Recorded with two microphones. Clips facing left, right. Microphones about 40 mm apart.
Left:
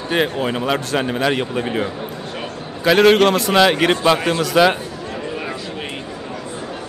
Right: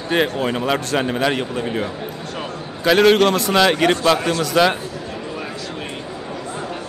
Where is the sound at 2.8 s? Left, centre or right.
Centre.